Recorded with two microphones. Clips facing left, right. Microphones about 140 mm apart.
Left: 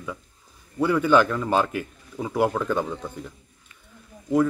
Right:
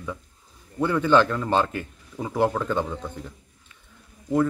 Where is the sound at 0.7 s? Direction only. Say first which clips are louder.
Left 1 dB; 10° left (ahead or behind).